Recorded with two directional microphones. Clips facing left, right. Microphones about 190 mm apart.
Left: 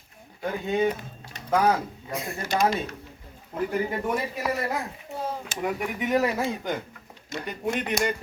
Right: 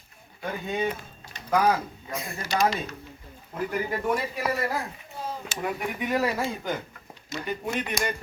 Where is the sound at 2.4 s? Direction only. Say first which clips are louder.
Left 1 dB; 50° left (ahead or behind).